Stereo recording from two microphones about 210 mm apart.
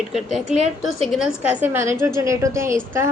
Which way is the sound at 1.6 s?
10° right (ahead or behind).